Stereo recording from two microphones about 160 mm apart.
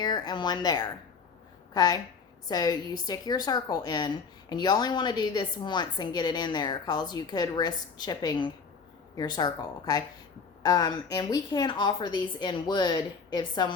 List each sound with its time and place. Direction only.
0.0 s a woman's voice: 25° left (ahead or behind)